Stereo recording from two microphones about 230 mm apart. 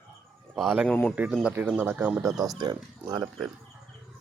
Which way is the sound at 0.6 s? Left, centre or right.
Centre.